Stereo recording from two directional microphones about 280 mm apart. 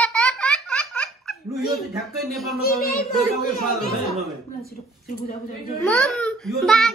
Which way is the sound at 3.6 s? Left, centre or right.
Left.